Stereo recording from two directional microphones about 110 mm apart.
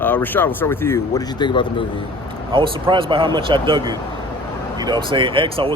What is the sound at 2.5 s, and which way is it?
Speech, 50° right (ahead or behind).